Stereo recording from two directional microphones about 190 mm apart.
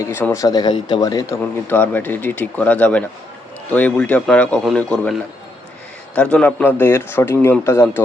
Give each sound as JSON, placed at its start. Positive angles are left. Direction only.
{"t": 0.0, "sound": "a man's voice", "side_deg": 10}
{"t": 6.1, "sound": "a man's voice", "side_deg": 5}